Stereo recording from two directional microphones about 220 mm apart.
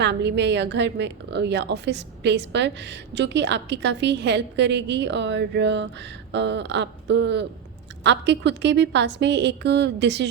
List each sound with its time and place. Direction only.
0.0 s a woman's voice: 50° right (ahead or behind)